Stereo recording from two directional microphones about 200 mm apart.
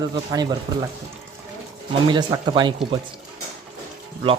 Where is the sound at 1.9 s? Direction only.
25° right (ahead or behind).